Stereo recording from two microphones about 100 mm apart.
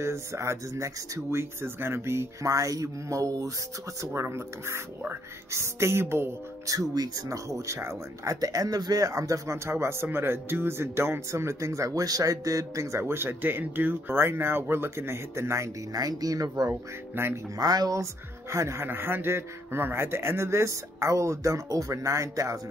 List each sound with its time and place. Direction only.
0.0 s speech: 30° right (ahead or behind)
17.1 s speech: 20° right (ahead or behind)
17.6 s speech: 40° right (ahead or behind)